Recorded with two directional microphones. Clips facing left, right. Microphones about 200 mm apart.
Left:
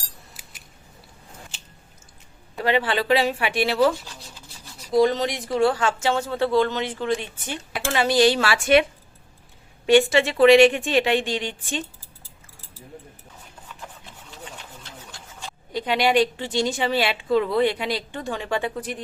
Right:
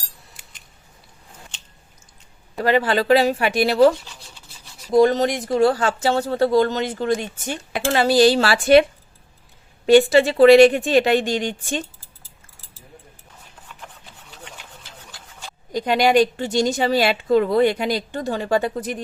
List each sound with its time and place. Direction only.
0.4 s scissors: 5° left (ahead or behind)
2.6 s speech: 40° right (ahead or behind)
4.9 s speech: 45° right (ahead or behind)
9.8 s speech: 35° right (ahead or behind)
14.8 s a sound: centre (ahead or behind)
15.7 s a woman's voice: 45° right (ahead or behind)